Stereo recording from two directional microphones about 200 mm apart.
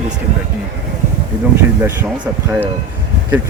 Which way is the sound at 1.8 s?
10° right (ahead or behind).